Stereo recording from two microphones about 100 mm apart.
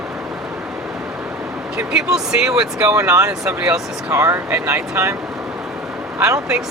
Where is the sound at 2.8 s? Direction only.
30° right (ahead or behind).